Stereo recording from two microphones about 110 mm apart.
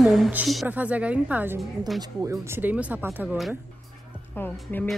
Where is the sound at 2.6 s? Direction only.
15° right (ahead or behind).